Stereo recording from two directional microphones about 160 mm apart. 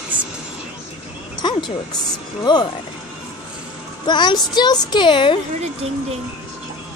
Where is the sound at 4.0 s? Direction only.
25° left (ahead or behind).